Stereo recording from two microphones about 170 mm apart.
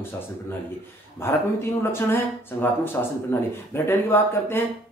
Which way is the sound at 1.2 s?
15° left (ahead or behind).